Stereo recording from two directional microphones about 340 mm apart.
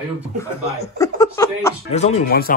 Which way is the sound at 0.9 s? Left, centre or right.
Centre.